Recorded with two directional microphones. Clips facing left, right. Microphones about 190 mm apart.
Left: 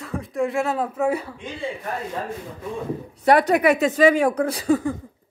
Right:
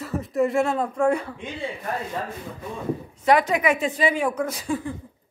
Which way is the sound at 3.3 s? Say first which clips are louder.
Left 4 dB; 60° left (ahead or behind).